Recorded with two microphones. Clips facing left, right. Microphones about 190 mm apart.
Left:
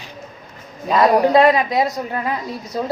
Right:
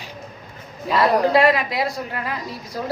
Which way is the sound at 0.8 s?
15° left (ahead or behind).